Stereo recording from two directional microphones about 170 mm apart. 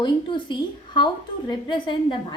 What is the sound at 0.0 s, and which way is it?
A woman's voice, 30° left (ahead or behind).